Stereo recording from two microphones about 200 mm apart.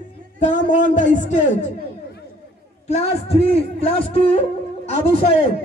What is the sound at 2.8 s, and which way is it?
A man's voice, 35° left (ahead or behind).